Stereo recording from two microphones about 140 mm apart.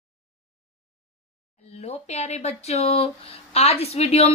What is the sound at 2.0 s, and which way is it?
Speech, 50° left (ahead or behind).